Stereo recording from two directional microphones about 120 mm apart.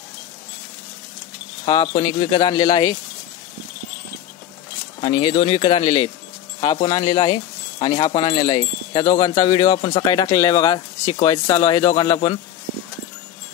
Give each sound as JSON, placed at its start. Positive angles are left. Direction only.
{"t": 1.7, "sound": "speech", "side_deg": 40}
{"t": 5.1, "sound": "speech", "side_deg": 40}
{"t": 11.8, "sound": "speech", "side_deg": 45}